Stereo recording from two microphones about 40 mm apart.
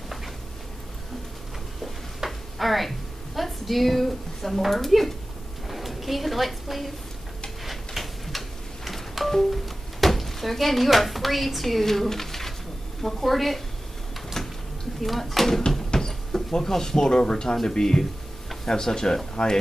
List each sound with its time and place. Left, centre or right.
2.1 s a sound: centre
3.3 s a woman's voice: centre
7.6 s tick-tock: centre
13.0 s speech: centre
14.3 s a sound: centre
15.0 s speech: centre